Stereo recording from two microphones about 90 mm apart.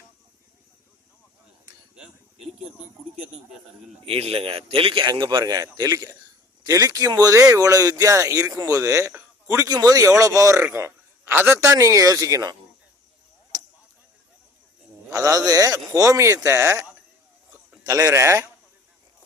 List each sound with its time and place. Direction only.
2.0 s a sound: 5° right (ahead or behind)
4.0 s a man's voice: 90° right; by 12.5 s 40° right (ahead or behind)
15.1 s speech: 40° right (ahead or behind)
17.8 s speech: 40° right (ahead or behind)